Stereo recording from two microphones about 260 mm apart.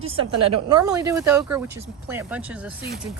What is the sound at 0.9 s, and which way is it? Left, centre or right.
Speech, centre.